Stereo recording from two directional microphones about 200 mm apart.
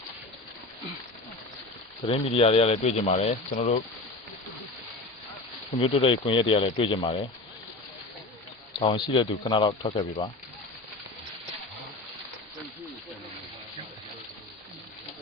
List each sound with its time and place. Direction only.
2.0 s speech: 30° left (ahead or behind)
5.8 s speech: 25° left (ahead or behind)
8.7 s speech: 25° left (ahead or behind)